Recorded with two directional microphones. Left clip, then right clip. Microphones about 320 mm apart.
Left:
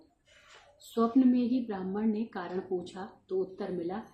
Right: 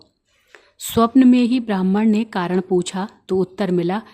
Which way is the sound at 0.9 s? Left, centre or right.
Right.